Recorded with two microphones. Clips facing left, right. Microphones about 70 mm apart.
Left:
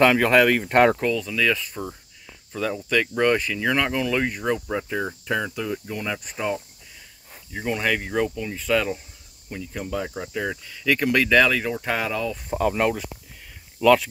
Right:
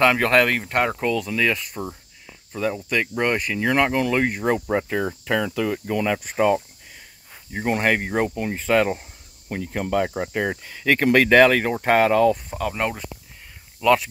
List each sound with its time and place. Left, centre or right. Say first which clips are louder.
0.2 s speech: left 1 dB; centre
1.2 s speech: right 1 dB; right
2.5 s speech: even; centre
4.6 s cricket: right 4 dB; right
7.5 s speech: right 3 dB; right
9.5 s speech: right 6 dB; right
12.4 s speech: left 4 dB; centre
12.7 s speech: left 3 dB; centre
13.8 s speech: left 1 dB; centre